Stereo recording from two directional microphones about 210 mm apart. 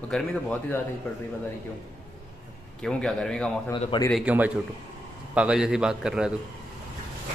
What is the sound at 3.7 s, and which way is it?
Speech, 20° left (ahead or behind).